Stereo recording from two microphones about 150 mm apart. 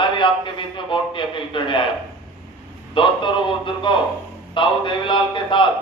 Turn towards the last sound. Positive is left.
turn(degrees=35)  # may be behind; listen again after turning